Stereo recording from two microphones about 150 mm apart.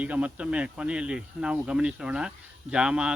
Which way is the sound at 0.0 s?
10° right (ahead or behind).